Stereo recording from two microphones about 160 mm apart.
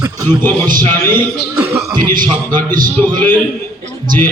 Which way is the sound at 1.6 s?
15° right (ahead or behind).